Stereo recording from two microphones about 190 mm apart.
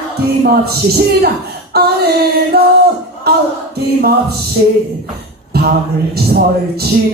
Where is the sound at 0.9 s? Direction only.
55° right (ahead or behind).